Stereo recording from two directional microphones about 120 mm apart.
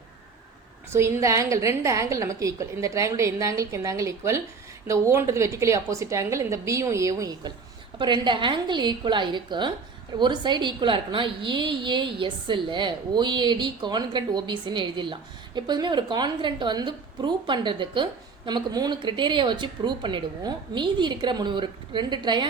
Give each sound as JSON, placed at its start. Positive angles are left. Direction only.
{"t": 0.9, "sound": "a woman's voice", "side_deg": -25}
{"t": 7.9, "sound": "a woman's voice", "side_deg": -40}